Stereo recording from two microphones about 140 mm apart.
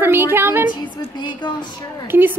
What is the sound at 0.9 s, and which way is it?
A woman's voice, 35° left (ahead or behind).